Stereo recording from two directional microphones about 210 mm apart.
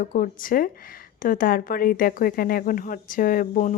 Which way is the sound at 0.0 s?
40° left (ahead or behind).